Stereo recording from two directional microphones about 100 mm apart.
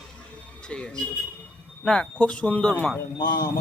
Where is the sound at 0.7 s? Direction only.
10° left (ahead or behind).